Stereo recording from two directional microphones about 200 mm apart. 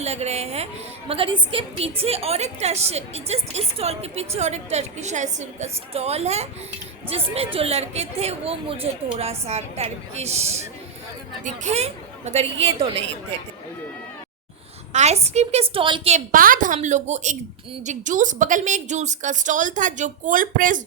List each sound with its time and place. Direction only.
0.0 s a woman's voice: 35° right (ahead or behind)
14.9 s a woman's voice: 35° right (ahead or behind)
16.1 s a woman's voice: 45° right (ahead or behind)